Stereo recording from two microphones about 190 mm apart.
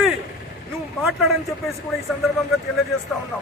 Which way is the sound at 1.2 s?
Centre (ahead or behind).